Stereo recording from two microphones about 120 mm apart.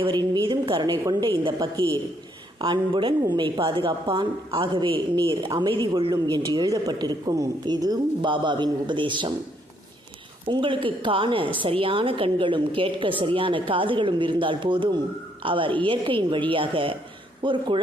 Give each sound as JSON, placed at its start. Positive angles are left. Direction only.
{"t": 0.0, "sound": "a woman's voice", "side_deg": -40}
{"t": 2.6, "sound": "a woman's voice", "side_deg": -45}
{"t": 10.5, "sound": "a woman's voice", "side_deg": -45}